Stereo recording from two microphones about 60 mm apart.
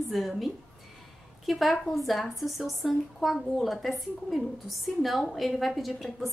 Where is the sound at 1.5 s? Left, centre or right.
Centre.